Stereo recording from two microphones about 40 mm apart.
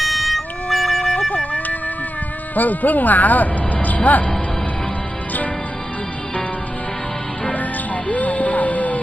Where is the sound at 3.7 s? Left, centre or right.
Left.